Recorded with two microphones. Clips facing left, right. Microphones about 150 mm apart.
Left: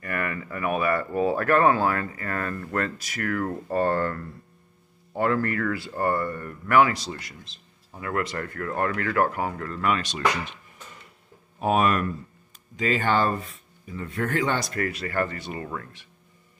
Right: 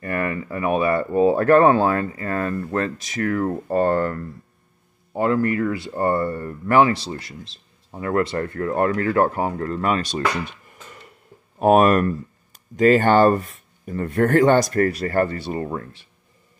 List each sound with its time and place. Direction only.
0.0 s speech: 30° right (ahead or behind)
11.6 s speech: 50° right (ahead or behind); by 16.1 s 30° right (ahead or behind)